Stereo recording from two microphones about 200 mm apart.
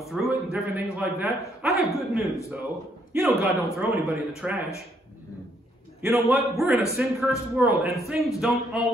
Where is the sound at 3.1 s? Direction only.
5° right (ahead or behind).